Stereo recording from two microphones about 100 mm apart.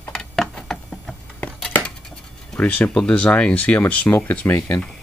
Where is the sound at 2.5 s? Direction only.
15° left (ahead or behind).